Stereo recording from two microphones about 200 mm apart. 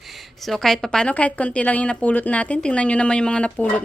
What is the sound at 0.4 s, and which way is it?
A woman's voice, centre (ahead or behind).